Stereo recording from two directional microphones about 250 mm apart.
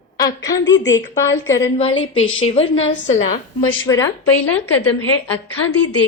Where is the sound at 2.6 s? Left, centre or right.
Left.